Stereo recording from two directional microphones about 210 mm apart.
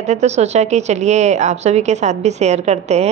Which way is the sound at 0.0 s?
35° right (ahead or behind).